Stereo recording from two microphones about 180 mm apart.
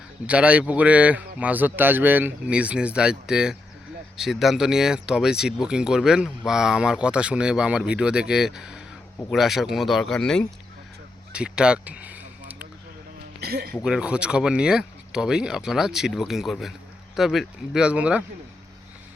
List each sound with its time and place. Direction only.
0.3 s speech: 5° right (ahead or behind)
11.3 s a sound: 5° right (ahead or behind)
13.4 s speech: 60° right (ahead or behind)
13.8 s speech: 5° right (ahead or behind)